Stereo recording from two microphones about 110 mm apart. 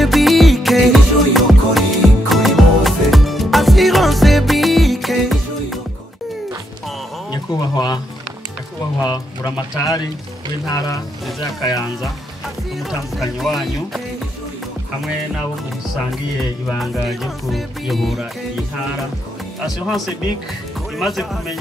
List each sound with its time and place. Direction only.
0.0 s music: centre (ahead or behind)
7.2 s a sound: 40° left (ahead or behind)
9.0 s music: 35° left (ahead or behind)
13.4 s music: centre (ahead or behind)
16.3 s music: centre (ahead or behind)
21.0 s music: centre (ahead or behind)